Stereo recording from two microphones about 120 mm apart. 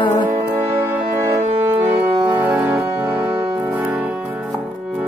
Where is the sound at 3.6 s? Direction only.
15° right (ahead or behind).